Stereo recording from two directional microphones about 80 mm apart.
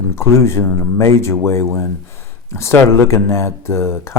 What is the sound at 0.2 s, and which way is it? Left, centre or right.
Speech, left.